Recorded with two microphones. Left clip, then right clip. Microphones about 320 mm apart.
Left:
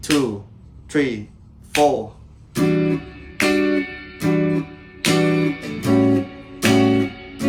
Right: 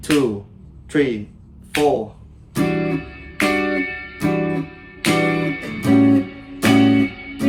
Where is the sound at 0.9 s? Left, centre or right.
Centre.